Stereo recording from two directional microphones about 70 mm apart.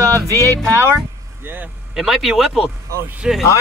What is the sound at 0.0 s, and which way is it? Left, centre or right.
Music, right.